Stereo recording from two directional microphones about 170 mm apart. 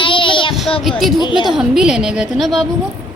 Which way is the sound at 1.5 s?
5° right (ahead or behind).